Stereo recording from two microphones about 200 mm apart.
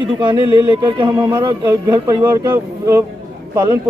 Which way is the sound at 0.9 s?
20° right (ahead or behind).